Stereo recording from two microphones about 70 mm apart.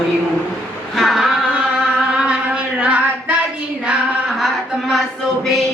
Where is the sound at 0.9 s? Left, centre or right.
Centre.